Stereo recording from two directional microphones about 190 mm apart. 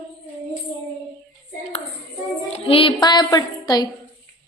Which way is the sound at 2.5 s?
30° left (ahead or behind).